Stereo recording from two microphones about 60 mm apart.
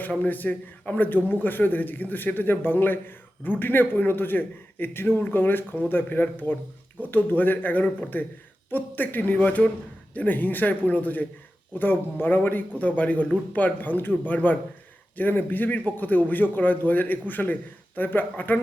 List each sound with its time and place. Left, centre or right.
0.1 s a man's voice: left